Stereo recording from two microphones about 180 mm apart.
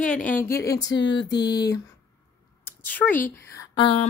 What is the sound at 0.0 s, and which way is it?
Speech, 5° left (ahead or behind).